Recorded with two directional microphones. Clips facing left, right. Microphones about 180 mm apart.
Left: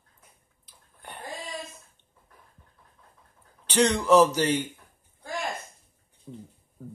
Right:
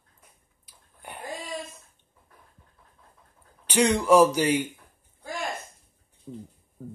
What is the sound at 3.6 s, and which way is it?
Speech, 10° right (ahead or behind).